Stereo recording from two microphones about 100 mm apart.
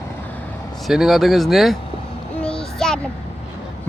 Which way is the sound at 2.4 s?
5° left (ahead or behind).